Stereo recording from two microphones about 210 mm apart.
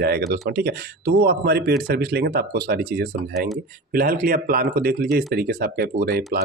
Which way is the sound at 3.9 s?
45° right (ahead or behind).